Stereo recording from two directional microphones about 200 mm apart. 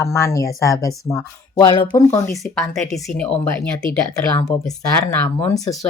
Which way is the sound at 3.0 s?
5° left (ahead or behind).